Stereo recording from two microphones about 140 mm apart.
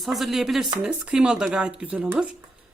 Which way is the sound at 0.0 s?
Centre (ahead or behind).